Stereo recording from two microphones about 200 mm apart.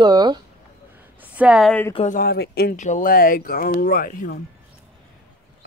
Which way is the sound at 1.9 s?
30° left (ahead or behind).